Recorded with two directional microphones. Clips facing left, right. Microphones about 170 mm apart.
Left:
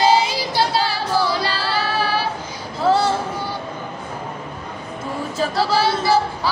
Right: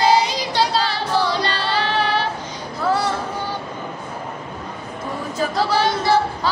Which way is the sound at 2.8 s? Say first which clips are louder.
Left 3 dB; 25° left (ahead or behind).